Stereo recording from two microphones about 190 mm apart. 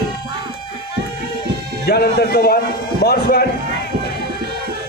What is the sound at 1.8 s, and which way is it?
A man's voice, 55° left (ahead or behind).